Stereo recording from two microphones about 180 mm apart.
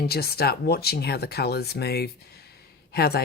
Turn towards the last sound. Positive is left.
turn(degrees=60)  # may be behind; listen again after turning